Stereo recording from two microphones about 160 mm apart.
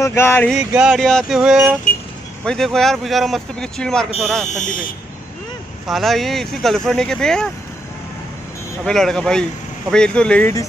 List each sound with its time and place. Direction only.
0.0 s speech: 15° left (ahead or behind)
0.5 s speech: 5° right (ahead or behind)
4.5 s speech: 50° left (ahead or behind)
5.9 s speech: centre (ahead or behind)
8.8 s speech: 5° left (ahead or behind)